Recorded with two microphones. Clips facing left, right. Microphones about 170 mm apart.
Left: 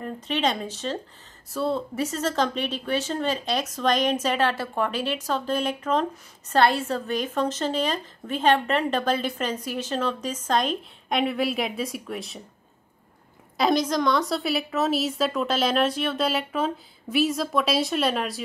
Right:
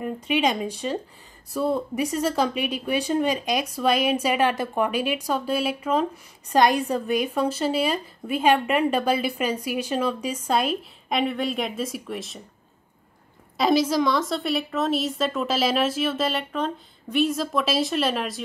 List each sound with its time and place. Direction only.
0.0 s a woman's voice: 10° right (ahead or behind)
13.6 s a woman's voice: 5° right (ahead or behind)